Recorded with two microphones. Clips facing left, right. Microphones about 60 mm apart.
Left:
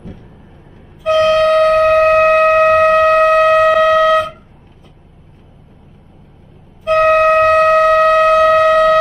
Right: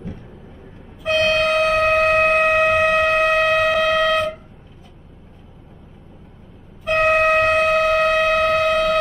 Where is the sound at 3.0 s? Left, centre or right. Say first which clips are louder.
Left 7 dB; left.